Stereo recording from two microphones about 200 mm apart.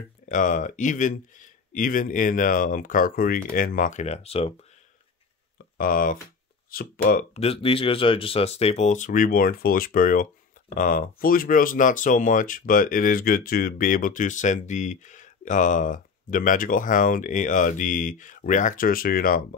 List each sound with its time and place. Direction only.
0.3 s speech: 40° left (ahead or behind)
5.8 s speech: 45° left (ahead or behind)
7.3 s speech: 30° left (ahead or behind); by 19.4 s 45° left (ahead or behind)